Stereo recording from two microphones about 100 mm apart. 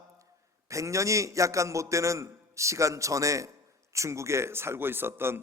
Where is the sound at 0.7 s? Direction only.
30° right (ahead or behind).